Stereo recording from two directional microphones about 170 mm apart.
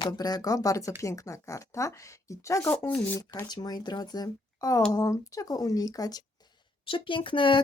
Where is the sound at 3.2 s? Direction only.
20° left (ahead or behind).